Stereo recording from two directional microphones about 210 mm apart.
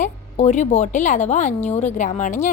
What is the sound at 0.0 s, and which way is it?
Speech, 35° left (ahead or behind).